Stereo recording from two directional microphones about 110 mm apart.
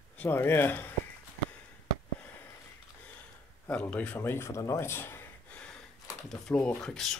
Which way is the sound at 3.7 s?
15° left (ahead or behind).